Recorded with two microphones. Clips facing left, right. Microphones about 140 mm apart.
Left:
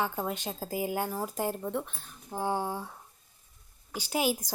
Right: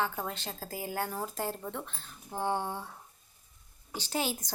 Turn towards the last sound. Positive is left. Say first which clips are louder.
# left 4 dB
turn(degrees=10)  # may be behind; listen again after turning